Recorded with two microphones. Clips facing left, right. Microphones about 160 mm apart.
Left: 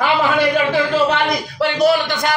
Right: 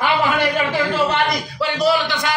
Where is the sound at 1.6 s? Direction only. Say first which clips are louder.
Left 3 dB; 55° left (ahead or behind).